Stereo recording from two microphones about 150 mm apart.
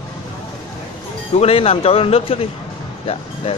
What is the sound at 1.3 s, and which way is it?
Speech, 40° left (ahead or behind).